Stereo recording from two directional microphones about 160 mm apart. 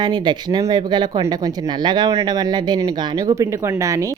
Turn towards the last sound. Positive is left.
turn(degrees=-20)  # may be behind; listen again after turning